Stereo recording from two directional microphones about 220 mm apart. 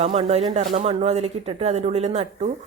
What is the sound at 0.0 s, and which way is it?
Speech, 30° right (ahead or behind).